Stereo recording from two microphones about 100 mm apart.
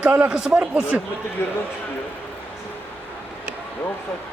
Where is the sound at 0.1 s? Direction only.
10° right (ahead or behind).